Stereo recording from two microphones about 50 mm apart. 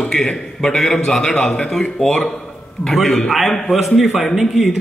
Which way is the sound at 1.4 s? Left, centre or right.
Left.